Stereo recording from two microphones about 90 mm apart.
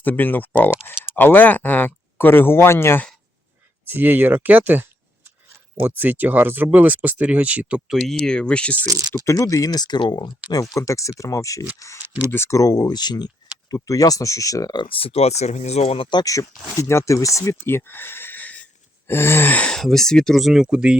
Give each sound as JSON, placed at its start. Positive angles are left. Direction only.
{"t": 0.0, "sound": "speech", "side_deg": 20}
{"t": 3.8, "sound": "speech", "side_deg": -20}
{"t": 7.9, "sound": "speech", "side_deg": 5}
{"t": 9.2, "sound": "speech", "side_deg": 35}
{"t": 10.5, "sound": "speech", "side_deg": 35}
{"t": 13.7, "sound": "speech", "side_deg": 40}
{"t": 14.8, "sound": "speech", "side_deg": 85}
{"t": 16.0, "sound": "speech", "side_deg": 55}
{"t": 16.2, "sound": "speech", "side_deg": 40}
{"t": 19.7, "sound": "speech", "side_deg": 5}